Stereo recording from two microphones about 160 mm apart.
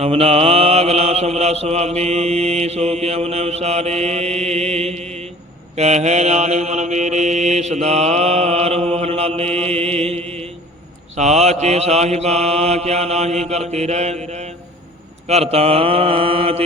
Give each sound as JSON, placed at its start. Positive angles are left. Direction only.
{"t": 0.0, "sound": "mantra", "side_deg": -40}